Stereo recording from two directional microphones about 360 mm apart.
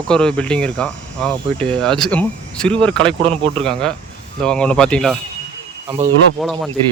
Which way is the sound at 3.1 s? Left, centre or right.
Centre.